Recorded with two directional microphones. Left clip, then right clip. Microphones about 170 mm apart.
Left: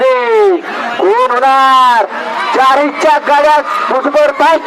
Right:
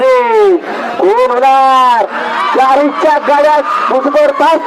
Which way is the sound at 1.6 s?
5° left (ahead or behind).